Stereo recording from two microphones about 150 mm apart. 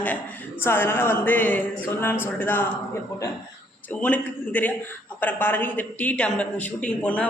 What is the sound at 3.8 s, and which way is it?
A man's voice, 10° left (ahead or behind).